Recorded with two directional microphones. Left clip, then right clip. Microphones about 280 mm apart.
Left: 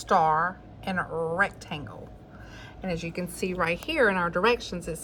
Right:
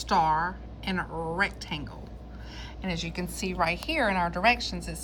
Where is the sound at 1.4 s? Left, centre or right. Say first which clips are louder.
Even; centre.